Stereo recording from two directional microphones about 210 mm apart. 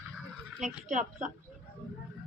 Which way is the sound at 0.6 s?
35° right (ahead or behind).